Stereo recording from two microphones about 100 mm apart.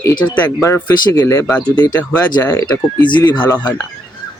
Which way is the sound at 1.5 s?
15° left (ahead or behind).